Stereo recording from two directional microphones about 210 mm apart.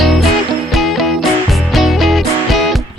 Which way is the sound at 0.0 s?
Centre (ahead or behind).